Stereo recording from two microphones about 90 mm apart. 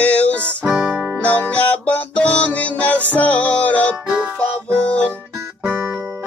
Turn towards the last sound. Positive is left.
turn(degrees=-10)  # may be behind; listen again after turning